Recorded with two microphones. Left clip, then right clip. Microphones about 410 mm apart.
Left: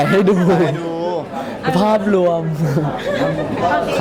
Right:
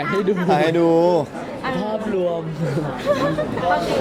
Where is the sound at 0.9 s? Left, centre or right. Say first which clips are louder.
Right 5 dB; right.